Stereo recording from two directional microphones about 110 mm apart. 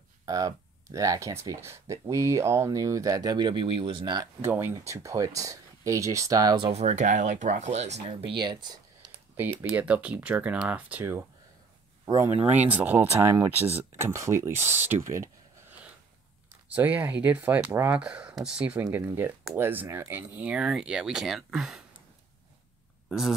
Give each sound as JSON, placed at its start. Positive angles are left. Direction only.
{"t": 0.2, "sound": "speech", "side_deg": -35}
{"t": 4.4, "sound": "speech", "side_deg": -20}
{"t": 4.7, "sound": "speech", "side_deg": -30}
{"t": 6.7, "sound": "speech", "side_deg": -85}
{"t": 8.1, "sound": "speech", "side_deg": -50}
{"t": 9.4, "sound": "speech", "side_deg": -15}
{"t": 16.7, "sound": "speech", "side_deg": -15}
{"t": 18.9, "sound": "speech", "side_deg": -20}
{"t": 23.0, "sound": "speech", "side_deg": -5}